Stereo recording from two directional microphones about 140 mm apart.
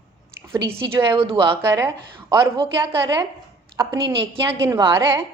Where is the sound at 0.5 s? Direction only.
25° right (ahead or behind).